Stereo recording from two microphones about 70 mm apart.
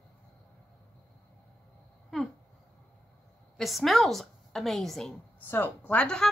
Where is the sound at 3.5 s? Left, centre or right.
Centre.